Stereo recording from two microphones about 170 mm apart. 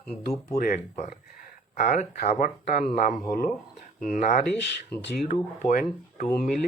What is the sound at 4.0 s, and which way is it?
Speech, 50° left (ahead or behind).